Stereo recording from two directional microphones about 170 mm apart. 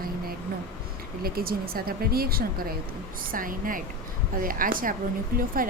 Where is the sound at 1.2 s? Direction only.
60° right (ahead or behind).